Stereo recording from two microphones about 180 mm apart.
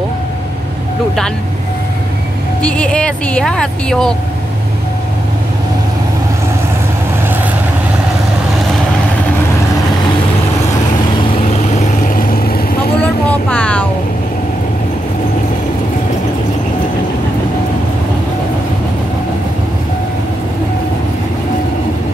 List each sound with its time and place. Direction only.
2.6 s speech: 5° left (ahead or behind)
11.2 s vehicle: 40° left (ahead or behind)
13.0 s vehicle: 5° left (ahead or behind)